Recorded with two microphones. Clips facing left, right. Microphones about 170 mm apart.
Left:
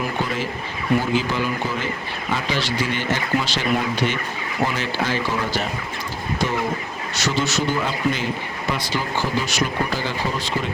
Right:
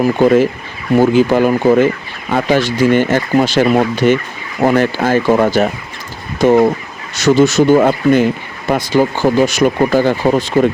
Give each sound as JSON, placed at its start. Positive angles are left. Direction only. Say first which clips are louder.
{"t": 0.0, "sound": "speech", "louder": "right 15 dB", "side_deg": -50}